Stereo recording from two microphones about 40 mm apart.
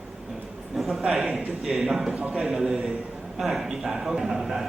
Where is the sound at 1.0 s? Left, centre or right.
Centre.